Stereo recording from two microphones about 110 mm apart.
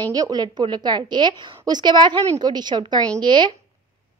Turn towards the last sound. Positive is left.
turn(degrees=-45)  # may be behind; listen again after turning